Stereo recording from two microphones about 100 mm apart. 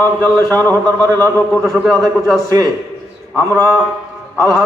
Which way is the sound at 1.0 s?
35° right (ahead or behind).